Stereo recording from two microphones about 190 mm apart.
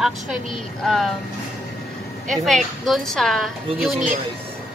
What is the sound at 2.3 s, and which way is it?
A woman's voice, centre (ahead or behind).